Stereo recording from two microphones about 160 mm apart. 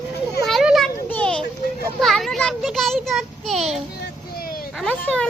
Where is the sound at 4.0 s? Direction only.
70° left (ahead or behind).